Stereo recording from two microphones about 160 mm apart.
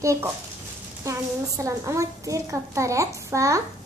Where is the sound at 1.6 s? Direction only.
20° right (ahead or behind).